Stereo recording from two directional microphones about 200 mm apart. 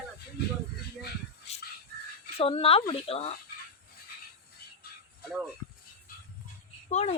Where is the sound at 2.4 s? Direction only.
30° left (ahead or behind).